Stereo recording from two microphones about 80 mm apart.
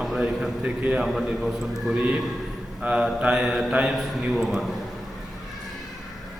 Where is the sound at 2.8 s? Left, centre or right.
Centre.